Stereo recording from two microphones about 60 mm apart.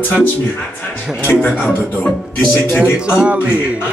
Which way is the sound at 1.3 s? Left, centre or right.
Centre.